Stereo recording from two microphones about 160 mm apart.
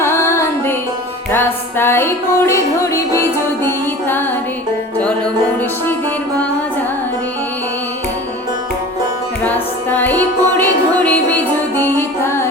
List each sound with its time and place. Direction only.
0.0 s music: 15° left (ahead or behind)
9.4 s music: 10° left (ahead or behind)